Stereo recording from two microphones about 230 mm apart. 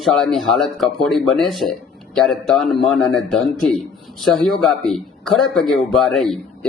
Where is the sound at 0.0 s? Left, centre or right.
Centre.